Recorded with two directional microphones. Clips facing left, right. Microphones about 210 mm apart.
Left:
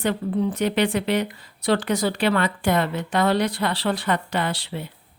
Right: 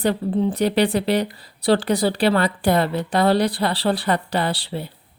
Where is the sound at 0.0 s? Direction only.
30° right (ahead or behind).